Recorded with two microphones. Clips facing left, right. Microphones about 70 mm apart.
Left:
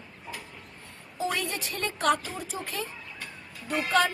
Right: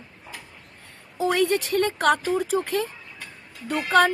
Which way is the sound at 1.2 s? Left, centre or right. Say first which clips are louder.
Right 9 dB; right.